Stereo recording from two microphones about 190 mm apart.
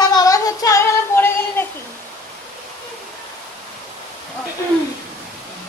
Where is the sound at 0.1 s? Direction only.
20° left (ahead or behind).